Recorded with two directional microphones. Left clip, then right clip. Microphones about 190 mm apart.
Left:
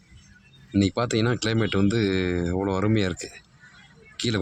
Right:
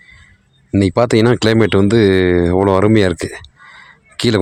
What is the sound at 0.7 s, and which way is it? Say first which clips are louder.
Speech: right 11 dB; 40° right (ahead or behind).